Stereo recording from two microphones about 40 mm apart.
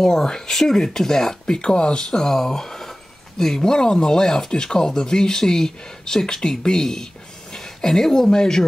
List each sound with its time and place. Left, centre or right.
0.0 s speech: centre
2.0 s speech: centre